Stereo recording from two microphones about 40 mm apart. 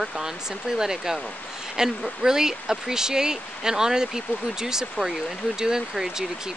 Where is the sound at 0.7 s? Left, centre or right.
Centre.